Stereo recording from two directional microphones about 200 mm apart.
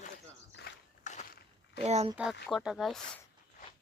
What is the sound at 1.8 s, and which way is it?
Speech, 30° right (ahead or behind).